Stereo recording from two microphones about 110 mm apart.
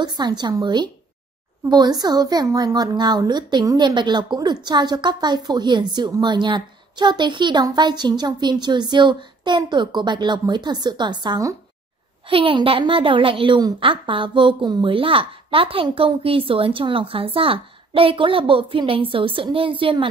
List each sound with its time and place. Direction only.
0.0 s a woman's voice: 40° right (ahead or behind)
12.3 s a child's voice: 55° right (ahead or behind)